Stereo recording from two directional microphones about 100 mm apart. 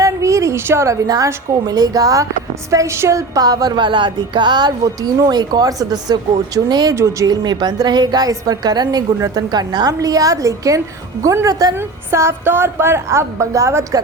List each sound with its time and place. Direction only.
0.0 s a woman's voice: 30° right (ahead or behind)